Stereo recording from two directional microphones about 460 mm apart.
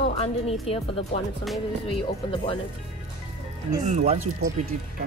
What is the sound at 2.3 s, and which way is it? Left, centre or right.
Music, centre.